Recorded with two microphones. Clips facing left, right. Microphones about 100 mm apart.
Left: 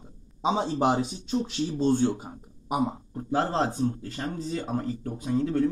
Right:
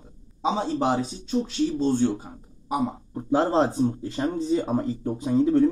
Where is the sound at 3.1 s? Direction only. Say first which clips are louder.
Right 5 dB; 20° right (ahead or behind).